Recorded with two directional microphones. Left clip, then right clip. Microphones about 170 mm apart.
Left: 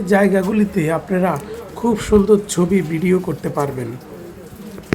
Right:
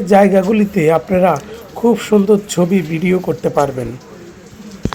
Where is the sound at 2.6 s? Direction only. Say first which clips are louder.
Right 2 dB; 15° right (ahead or behind).